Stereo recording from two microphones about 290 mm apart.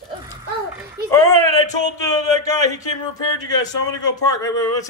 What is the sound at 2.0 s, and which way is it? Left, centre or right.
Speech, centre.